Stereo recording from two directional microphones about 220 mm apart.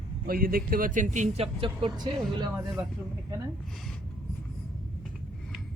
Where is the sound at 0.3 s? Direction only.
40° right (ahead or behind); by 2.8 s 20° right (ahead or behind).